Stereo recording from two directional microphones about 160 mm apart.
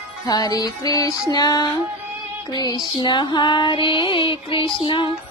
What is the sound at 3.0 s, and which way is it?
Female singing, 25° left (ahead or behind).